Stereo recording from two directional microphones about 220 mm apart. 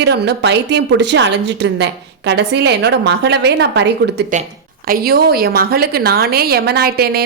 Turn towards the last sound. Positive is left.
turn(degrees=-45)  # may be behind; listen again after turning